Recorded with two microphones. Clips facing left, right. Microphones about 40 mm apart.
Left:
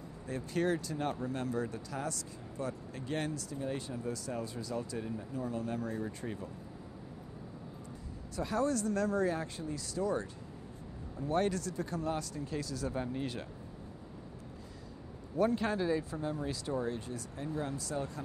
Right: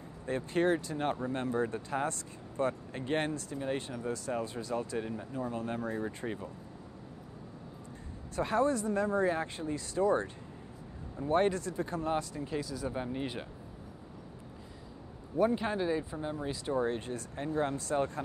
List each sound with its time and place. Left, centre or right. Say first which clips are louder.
0.3 s speech: right 4 dB; right
8.4 s speech: right 3 dB; right
15.3 s speech: right 1 dB; centre; by 18.2 s right